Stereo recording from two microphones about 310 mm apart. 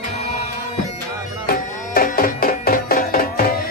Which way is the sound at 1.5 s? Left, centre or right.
Left.